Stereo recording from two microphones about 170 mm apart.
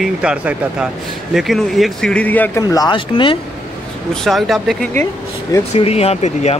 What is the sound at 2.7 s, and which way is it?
Speech, 25° left (ahead or behind).